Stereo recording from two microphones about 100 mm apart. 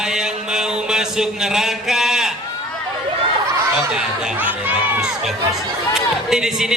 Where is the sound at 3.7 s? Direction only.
5° right (ahead or behind).